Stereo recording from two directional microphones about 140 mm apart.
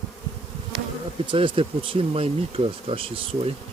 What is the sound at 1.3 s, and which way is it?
Speech, 40° right (ahead or behind).